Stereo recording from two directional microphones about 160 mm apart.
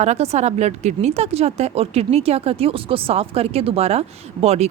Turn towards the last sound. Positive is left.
turn(degrees=-40)  # may be behind; listen again after turning